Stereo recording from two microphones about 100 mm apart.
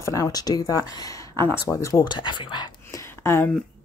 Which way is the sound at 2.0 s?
50° left (ahead or behind).